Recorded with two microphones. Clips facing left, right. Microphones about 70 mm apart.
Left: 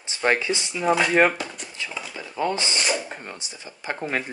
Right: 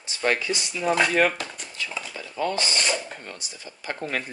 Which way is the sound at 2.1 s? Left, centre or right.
Left.